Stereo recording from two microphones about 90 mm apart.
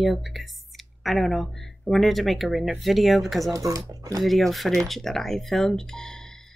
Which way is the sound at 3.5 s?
40° right (ahead or behind).